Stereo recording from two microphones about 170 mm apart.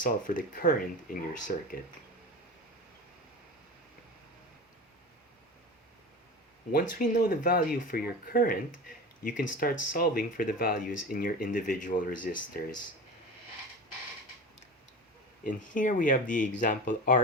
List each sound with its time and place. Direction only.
0.0 s speech: 50° left (ahead or behind)
7.1 s speech: 55° left (ahead or behind)
15.4 s speech: 50° left (ahead or behind)